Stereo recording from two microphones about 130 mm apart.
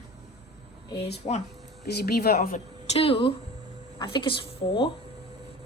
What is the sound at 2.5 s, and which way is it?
A woman's voice, 60° left (ahead or behind).